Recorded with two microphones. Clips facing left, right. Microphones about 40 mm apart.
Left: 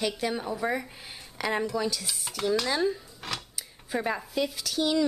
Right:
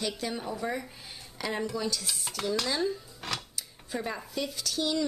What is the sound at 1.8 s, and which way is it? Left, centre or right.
Stir, centre.